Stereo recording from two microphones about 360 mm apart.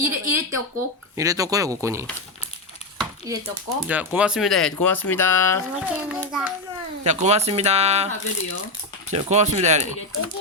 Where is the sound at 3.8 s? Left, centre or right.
Centre.